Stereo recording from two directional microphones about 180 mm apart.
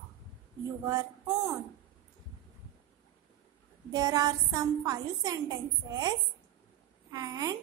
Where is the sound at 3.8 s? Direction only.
20° right (ahead or behind).